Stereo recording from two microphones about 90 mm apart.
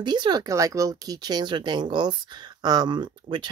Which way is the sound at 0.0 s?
55° right (ahead or behind).